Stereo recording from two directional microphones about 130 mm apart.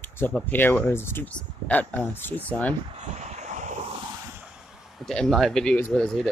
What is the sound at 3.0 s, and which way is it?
Vehicle, 60° right (ahead or behind).